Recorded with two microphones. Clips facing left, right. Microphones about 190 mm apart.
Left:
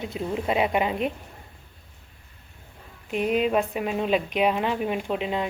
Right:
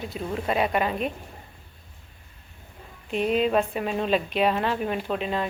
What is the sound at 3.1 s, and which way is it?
Speech, 10° left (ahead or behind).